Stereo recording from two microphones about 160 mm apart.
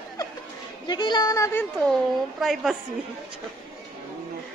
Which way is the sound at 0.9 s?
30° left (ahead or behind).